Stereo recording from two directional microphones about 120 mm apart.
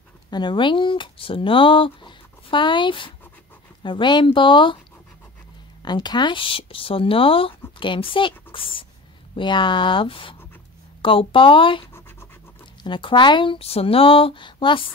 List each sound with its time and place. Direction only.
0.3 s speech: 40° left (ahead or behind)
5.8 s speech: 35° left (ahead or behind)
12.8 s speech: 40° left (ahead or behind)